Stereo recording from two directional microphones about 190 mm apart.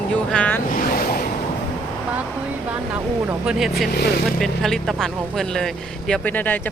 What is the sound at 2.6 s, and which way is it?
Speech, 5° right (ahead or behind).